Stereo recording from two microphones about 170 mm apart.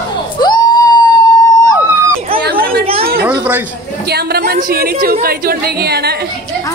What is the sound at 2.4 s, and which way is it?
Speech, 60° right (ahead or behind).